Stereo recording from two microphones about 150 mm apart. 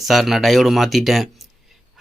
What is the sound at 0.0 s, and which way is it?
Speech, centre (ahead or behind).